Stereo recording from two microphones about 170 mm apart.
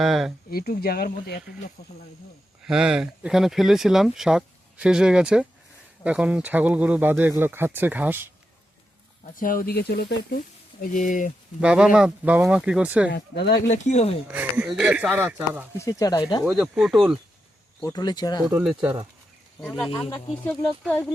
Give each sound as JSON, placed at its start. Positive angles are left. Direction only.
{"t": 0.0, "sound": "speech", "side_deg": 0}
{"t": 0.5, "sound": "speech", "side_deg": 65}
{"t": 2.6, "sound": "speech", "side_deg": -5}
{"t": 9.2, "sound": "speech", "side_deg": 55}
{"t": 11.6, "sound": "speech", "side_deg": -5}
{"t": 13.1, "sound": "speech", "side_deg": 80}
{"t": 13.7, "sound": "speech", "side_deg": 40}
{"t": 14.3, "sound": "speech", "side_deg": -10}
{"t": 15.8, "sound": "speech", "side_deg": 20}
{"t": 16.4, "sound": "speech", "side_deg": 0}
{"t": 17.8, "sound": "speech", "side_deg": 25}
{"t": 18.6, "sound": "speech", "side_deg": -5}
{"t": 20.4, "sound": "speech", "side_deg": 5}